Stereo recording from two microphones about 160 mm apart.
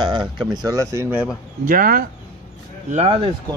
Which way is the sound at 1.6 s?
60° right (ahead or behind).